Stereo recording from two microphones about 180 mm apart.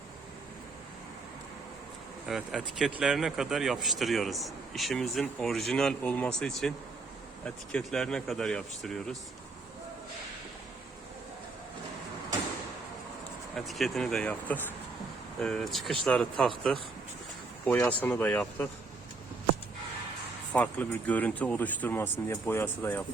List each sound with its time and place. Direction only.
2.2 s speech: centre (ahead or behind)
13.7 s speech: centre (ahead or behind)
17.7 s speech: 10° left (ahead or behind)
20.5 s speech: 10° left (ahead or behind)